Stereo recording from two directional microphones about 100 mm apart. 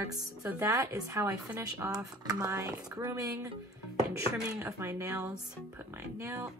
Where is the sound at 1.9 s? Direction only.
40° right (ahead or behind).